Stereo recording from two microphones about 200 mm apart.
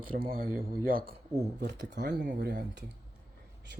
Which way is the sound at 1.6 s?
60° right (ahead or behind).